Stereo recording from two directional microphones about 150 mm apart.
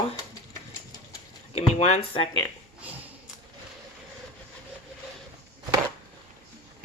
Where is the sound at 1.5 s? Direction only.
45° left (ahead or behind).